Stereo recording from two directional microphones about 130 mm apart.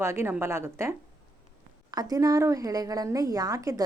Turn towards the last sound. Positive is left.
turn(degrees=-25)  # may be behind; listen again after turning